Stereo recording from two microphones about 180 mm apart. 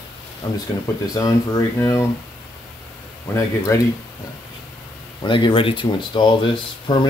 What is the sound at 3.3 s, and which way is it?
Speech, 15° left (ahead or behind).